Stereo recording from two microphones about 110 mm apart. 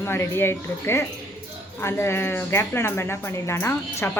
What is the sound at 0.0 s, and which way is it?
Speech, 25° left (ahead or behind).